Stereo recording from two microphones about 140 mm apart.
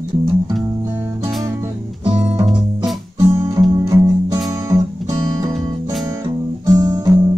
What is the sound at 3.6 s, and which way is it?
Music, 30° right (ahead or behind).